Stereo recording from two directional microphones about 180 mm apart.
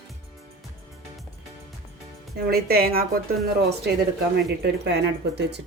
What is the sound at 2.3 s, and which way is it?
Speech, 60° right (ahead or behind).